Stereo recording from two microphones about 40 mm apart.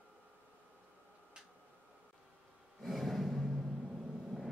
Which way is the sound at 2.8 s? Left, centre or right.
Centre.